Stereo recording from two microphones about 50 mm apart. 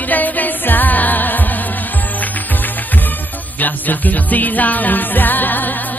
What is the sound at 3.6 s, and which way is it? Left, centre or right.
Music, left.